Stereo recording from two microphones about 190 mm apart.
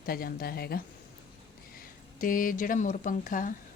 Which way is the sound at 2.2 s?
45° left (ahead or behind).